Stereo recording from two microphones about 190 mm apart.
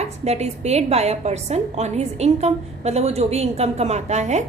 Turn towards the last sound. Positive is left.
turn(degrees=-35)  # may be behind; listen again after turning